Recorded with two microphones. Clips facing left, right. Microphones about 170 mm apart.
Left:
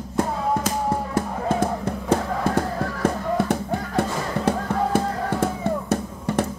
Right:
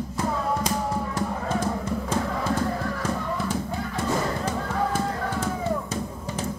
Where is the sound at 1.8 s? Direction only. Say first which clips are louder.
Left 4 dB; 60° left (ahead or behind).